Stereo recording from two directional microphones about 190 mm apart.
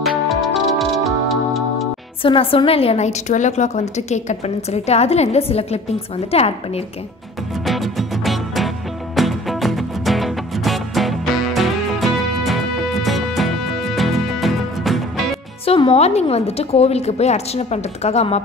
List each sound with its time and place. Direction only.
0.3 s music: centre (ahead or behind)
2.2 s a woman's voice: 30° left (ahead or behind)
7.6 s music: centre (ahead or behind)
15.6 s a woman's voice: 30° left (ahead or behind)